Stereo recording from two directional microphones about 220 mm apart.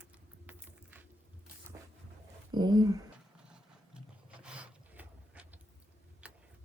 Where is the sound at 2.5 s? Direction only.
20° right (ahead or behind).